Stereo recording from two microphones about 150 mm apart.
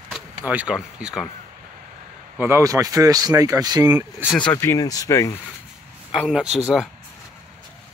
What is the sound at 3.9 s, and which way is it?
Speech, 10° right (ahead or behind).